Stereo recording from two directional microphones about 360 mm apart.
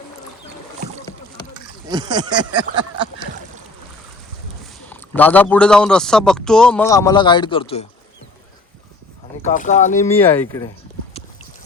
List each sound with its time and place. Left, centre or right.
1.9 s speech: centre
4.9 s a man's voice: centre
9.4 s speech: left
10.2 s speech: centre